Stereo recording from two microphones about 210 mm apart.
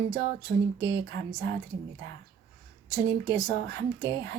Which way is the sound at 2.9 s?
20° left (ahead or behind).